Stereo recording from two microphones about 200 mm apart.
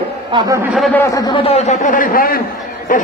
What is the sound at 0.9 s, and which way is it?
A man's voice, 15° left (ahead or behind).